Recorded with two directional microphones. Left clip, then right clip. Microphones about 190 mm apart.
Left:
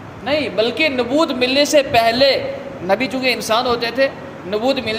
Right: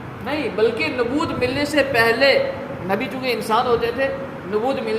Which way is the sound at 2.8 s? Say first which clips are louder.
Left 6 dB; 45° left (ahead or behind).